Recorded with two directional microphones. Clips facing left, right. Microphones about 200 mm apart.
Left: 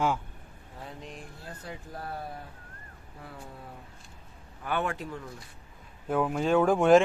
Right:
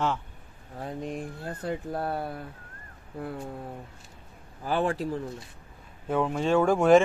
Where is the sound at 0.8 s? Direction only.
50° right (ahead or behind).